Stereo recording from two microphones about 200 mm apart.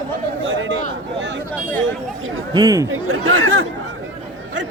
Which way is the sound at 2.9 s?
90° right.